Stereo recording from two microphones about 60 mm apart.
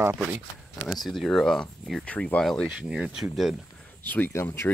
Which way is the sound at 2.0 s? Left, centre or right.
Centre.